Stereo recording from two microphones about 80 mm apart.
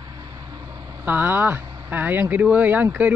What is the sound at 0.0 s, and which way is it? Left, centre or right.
Vehicle, right.